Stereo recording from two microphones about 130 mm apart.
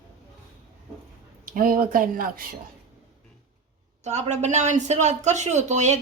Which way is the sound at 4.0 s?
60° right (ahead or behind).